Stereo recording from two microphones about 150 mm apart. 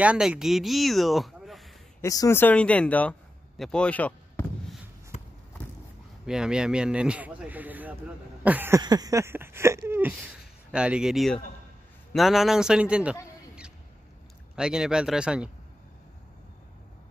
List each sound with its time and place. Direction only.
0.0 s speech: 10° right (ahead or behind)
2.0 s speech: 20° left (ahead or behind)
5.1 s run: 50° left (ahead or behind)
6.2 s a man's voice: 5° right (ahead or behind)
8.8 s a sound: 25° right (ahead or behind); by 11.3 s centre (ahead or behind)
12.1 s a man's voice: centre (ahead or behind)
14.5 s a man's voice: 5° right (ahead or behind)